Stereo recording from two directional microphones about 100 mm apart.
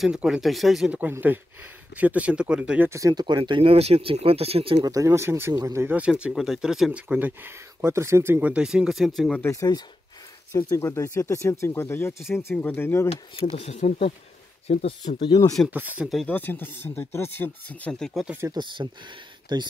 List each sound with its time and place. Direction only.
0.0 s speech: 5° right (ahead or behind)
0.9 s speech: 20° right (ahead or behind)
2.9 s speech: 35° right (ahead or behind)
3.3 s speech: 50° right (ahead or behind)
3.6 s speech: 90° right
4.8 s speech: 35° right (ahead or behind)
5.9 s speech: 15° right (ahead or behind)
9.4 s speech: 30° left (ahead or behind)
13.1 s speech: 80° left
15.2 s speech: 40° left (ahead or behind)
15.7 s speech: 15° right (ahead or behind)
16.3 s speech: 20° left (ahead or behind)
18.5 s speech: 50° right (ahead or behind)